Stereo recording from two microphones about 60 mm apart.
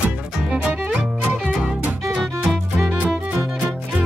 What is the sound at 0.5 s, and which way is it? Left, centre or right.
Music, right.